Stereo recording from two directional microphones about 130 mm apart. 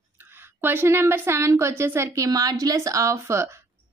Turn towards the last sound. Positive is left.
turn(degrees=-20)  # may be behind; listen again after turning